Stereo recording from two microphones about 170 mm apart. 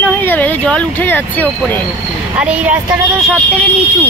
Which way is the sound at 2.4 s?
5° right (ahead or behind).